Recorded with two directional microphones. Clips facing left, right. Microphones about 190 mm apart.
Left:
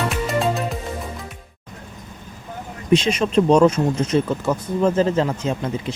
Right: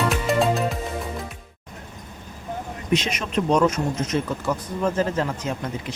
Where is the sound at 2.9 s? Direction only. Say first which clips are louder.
Left 7 dB; 30° left (ahead or behind).